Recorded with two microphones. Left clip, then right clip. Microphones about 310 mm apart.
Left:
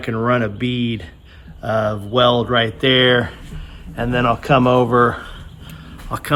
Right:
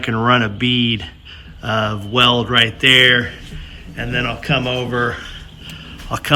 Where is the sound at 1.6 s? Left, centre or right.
Centre.